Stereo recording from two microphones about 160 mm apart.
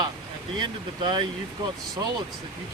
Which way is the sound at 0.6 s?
30° right (ahead or behind).